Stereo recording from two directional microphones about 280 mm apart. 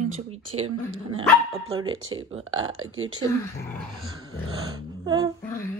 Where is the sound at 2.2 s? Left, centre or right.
Centre.